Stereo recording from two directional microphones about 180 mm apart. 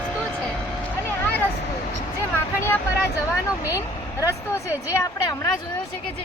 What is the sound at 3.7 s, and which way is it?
Speech, 15° left (ahead or behind).